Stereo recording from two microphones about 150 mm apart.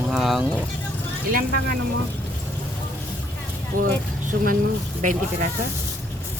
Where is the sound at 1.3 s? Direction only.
75° right (ahead or behind).